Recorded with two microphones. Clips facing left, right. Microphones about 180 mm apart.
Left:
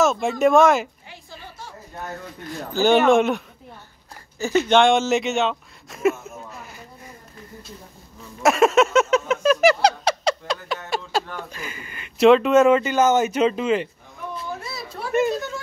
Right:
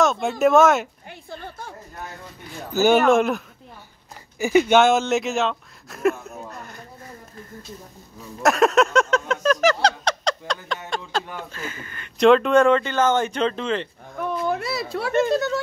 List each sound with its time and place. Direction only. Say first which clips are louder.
0.0 s speech: left 1 dB; centre (ahead or behind)
1.0 s a sound: right 5 dB; 55° right (ahead or behind)
2.7 s speech: even; 5° right (ahead or behind)
4.4 s speech: right 1 dB; 15° right (ahead or behind); by 6.8 s 5° left (ahead or behind)
8.4 s a sound: left 1 dB; centre (ahead or behind)
10.9 s speech: left 3 dB; 10° left (ahead or behind)
14.5 s speech: right 8 dB; 75° right (ahead or behind)